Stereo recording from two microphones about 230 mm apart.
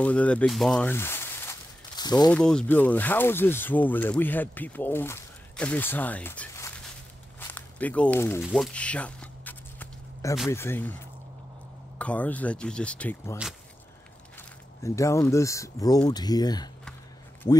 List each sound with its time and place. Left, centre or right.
0.0 s speech: centre
2.3 s speech: centre
7.3 s walk: centre
10.5 s speech: centre
12.0 s speech: centre
14.8 s speech: centre